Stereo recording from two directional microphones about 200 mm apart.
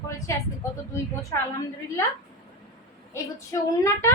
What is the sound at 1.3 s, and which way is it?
Speech, 15° left (ahead or behind).